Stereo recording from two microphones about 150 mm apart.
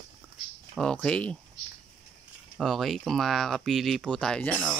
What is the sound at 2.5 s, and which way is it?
Speech, centre (ahead or behind).